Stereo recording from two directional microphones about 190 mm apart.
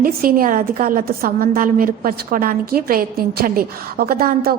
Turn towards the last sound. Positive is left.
turn(degrees=-50)  # may be behind; listen again after turning